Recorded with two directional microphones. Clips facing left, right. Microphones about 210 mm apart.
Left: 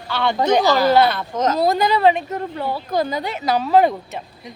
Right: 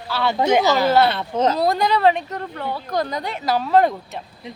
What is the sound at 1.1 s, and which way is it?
Speech, 30° right (ahead or behind).